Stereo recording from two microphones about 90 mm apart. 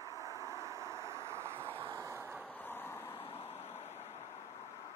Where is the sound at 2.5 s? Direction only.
20° left (ahead or behind).